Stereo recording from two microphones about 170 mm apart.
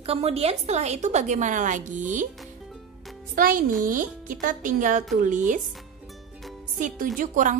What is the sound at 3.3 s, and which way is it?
A woman's voice, 55° right (ahead or behind).